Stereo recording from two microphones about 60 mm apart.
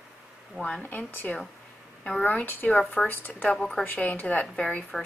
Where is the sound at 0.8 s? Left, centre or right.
Left.